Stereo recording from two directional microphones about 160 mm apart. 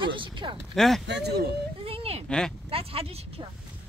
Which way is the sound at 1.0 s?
90° right.